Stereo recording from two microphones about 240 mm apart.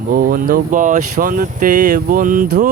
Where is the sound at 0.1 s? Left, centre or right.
Right.